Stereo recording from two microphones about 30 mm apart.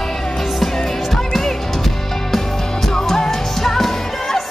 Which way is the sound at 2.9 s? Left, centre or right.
Centre.